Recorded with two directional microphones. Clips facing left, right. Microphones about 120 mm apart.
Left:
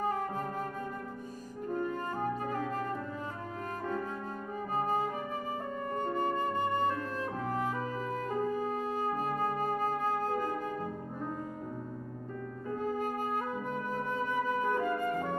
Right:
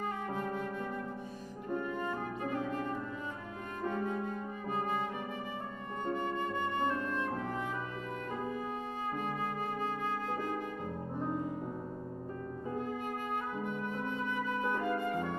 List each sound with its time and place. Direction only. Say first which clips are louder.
0.0 s music: left 3 dB; 40° left (ahead or behind)
2.0 s music: left 3 dB; 40° left (ahead or behind)
4.7 s music: left 4 dB; 40° left (ahead or behind)
5.9 s flute: left 2 dB; 40° left (ahead or behind)
8.5 s music: left 5 dB; 40° left (ahead or behind)
13.7 s flute: left 2 dB; 40° left (ahead or behind)